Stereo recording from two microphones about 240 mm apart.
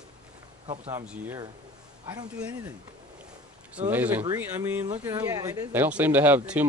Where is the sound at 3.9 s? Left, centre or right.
Centre.